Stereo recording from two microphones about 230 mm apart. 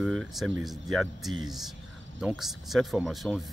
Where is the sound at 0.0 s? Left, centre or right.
Centre.